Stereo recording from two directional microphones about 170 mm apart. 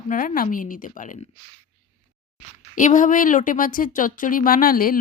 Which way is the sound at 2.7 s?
50° left (ahead or behind).